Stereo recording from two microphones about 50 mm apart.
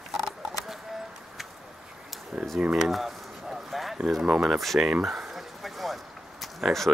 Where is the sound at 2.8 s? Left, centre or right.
Centre.